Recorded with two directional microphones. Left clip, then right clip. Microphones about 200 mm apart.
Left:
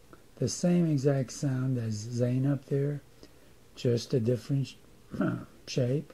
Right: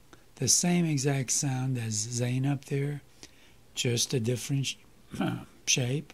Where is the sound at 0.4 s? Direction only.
20° right (ahead or behind).